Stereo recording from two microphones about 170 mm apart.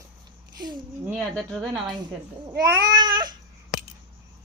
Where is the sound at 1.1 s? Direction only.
5° left (ahead or behind).